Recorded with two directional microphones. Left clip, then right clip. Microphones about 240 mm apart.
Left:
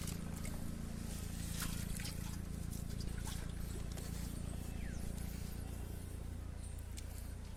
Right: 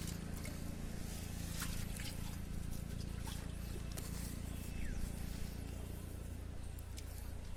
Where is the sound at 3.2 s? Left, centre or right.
Centre.